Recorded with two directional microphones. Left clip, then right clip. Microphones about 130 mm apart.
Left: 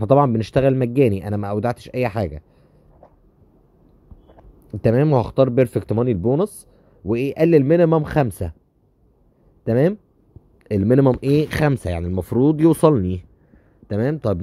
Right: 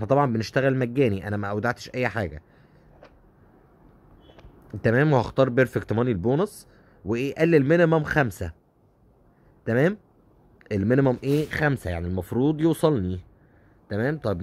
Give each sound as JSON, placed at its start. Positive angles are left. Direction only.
{"t": 0.0, "sound": "speech", "side_deg": 30}
{"t": 5.0, "sound": "speech", "side_deg": 20}
{"t": 9.7, "sound": "a man's voice", "side_deg": 25}
{"t": 11.4, "sound": "speech", "side_deg": 50}
{"t": 11.7, "sound": "speech", "side_deg": 35}